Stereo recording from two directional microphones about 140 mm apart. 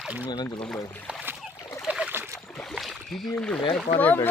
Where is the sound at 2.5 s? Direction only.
Centre (ahead or behind).